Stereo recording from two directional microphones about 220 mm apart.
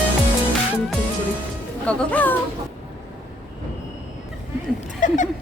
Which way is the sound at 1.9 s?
5° left (ahead or behind).